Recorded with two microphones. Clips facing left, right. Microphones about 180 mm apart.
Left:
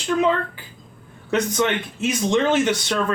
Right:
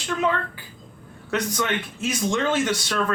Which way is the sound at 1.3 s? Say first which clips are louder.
Left 4 dB; 20° left (ahead or behind).